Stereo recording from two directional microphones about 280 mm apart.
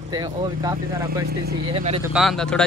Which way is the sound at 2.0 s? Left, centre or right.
Centre.